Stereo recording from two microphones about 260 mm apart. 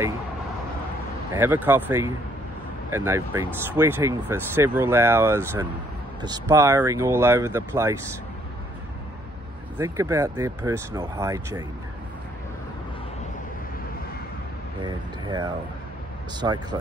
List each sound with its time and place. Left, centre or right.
1.3 s speech: centre
9.8 s speech: centre
14.8 s speech: centre